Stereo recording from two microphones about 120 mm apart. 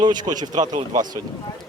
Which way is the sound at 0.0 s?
35° right (ahead or behind).